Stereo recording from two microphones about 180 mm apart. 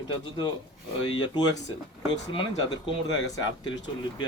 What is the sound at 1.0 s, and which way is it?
Speech, 25° left (ahead or behind).